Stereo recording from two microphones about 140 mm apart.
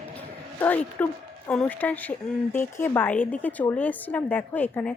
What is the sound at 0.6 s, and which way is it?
Speech, 10° left (ahead or behind).